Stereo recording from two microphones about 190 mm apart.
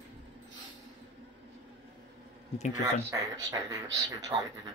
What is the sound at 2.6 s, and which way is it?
Speech, 35° left (ahead or behind).